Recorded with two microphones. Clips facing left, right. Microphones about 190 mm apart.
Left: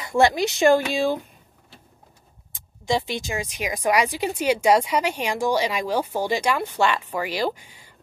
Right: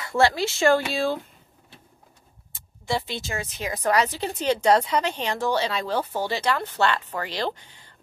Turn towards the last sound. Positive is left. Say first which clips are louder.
# left 3 dB
turn(degrees=10)  # may be behind; listen again after turning